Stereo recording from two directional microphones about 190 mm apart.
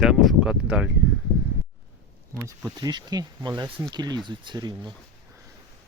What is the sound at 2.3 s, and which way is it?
Speech, 15° right (ahead or behind).